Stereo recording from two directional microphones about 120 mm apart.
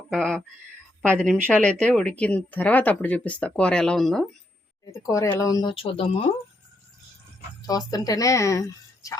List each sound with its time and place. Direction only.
0.1 s speech: 5° left (ahead or behind)
4.9 s a woman's voice: 25° left (ahead or behind)
5.6 s speech: 50° left (ahead or behind)
7.7 s a woman's voice: 30° left (ahead or behind)